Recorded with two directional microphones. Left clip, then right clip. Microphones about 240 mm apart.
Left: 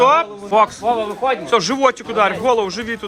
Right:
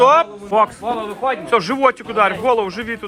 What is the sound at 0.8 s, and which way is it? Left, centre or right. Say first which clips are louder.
Speech: left 3 dB; left.